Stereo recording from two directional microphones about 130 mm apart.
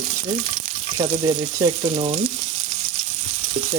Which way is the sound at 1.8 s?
50° right (ahead or behind).